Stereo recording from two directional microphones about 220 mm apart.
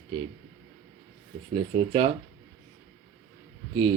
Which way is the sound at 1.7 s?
25° right (ahead or behind).